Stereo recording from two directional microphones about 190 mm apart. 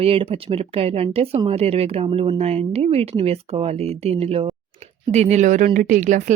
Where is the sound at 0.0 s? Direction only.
30° right (ahead or behind).